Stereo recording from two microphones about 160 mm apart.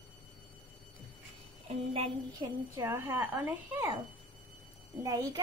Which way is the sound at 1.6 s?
35° right (ahead or behind).